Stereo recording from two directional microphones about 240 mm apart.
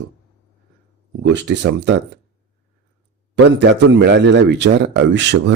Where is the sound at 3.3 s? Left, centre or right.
Right.